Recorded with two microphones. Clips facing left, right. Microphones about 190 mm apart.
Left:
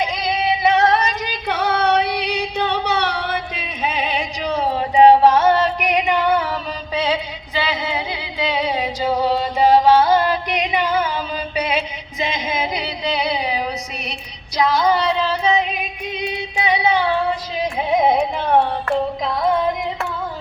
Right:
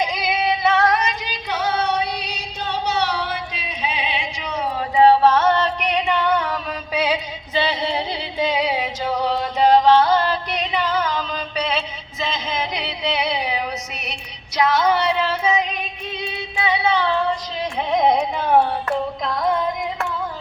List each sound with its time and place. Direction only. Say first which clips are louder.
0.0 s female singing: left 1 dB; 10° right (ahead or behind)
0.6 s female singing: left 3 dB; 20° left (ahead or behind)
1.2 s female singing: left 3 dB; 55° left (ahead or behind); by 6.6 s 5° left (ahead or behind)
6.9 s a sound: left 1 dB; 10° right (ahead or behind)
7.5 s female singing: right 1 dB; 25° right (ahead or behind)
8.5 s music: left 1 dB; 10° right (ahead or behind)
14.1 s female singing: left 2 dB; centre (ahead or behind)
15.7 s female singing: left 3 dB; 15° left (ahead or behind)